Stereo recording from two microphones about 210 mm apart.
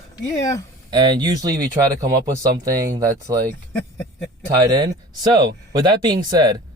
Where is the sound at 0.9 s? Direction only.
20° right (ahead or behind).